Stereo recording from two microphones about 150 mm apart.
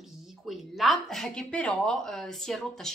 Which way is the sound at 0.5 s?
Centre (ahead or behind).